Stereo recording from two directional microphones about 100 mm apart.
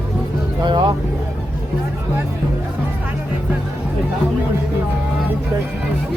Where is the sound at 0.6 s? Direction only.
50° right (ahead or behind).